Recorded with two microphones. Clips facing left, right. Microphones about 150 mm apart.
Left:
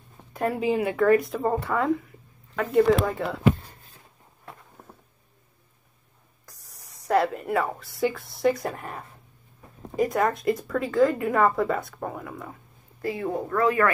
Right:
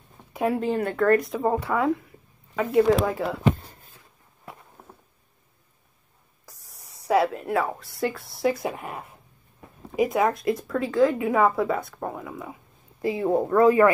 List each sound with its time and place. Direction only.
0.3 s speech: centre (ahead or behind)
6.4 s a woman's voice: centre (ahead or behind)
13.0 s speech: 20° right (ahead or behind)
13.3 s speech: 30° right (ahead or behind)